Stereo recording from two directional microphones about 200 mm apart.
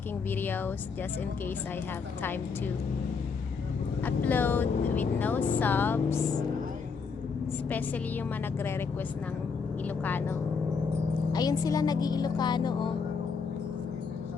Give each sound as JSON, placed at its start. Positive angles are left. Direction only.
{"t": 0.3, "sound": "speech", "side_deg": 10}
{"t": 4.0, "sound": "speech", "side_deg": 10}
{"t": 7.7, "sound": "speech", "side_deg": 10}
{"t": 9.8, "sound": "a woman's voice", "side_deg": 10}